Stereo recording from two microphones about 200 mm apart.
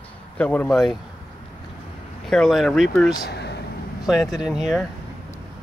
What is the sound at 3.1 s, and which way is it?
Speech, 55° left (ahead or behind).